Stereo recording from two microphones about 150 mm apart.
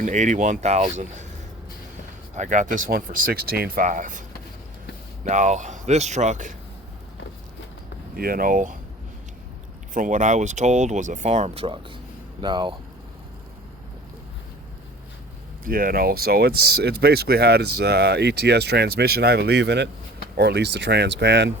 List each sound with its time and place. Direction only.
0.0 s speech: 55° right (ahead or behind)
2.3 s speech: 55° right (ahead or behind)
5.3 s speech: 55° right (ahead or behind)
8.1 s speech: 75° right (ahead or behind)
9.9 s speech: 60° right (ahead or behind); by 12.7 s 30° right (ahead or behind)
15.6 s speech: 70° right (ahead or behind); by 21.1 s 90° right